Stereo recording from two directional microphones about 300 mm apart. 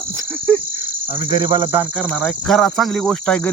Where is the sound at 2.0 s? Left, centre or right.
Centre.